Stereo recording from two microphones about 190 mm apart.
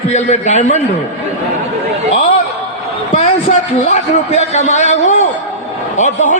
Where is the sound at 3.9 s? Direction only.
35° left (ahead or behind).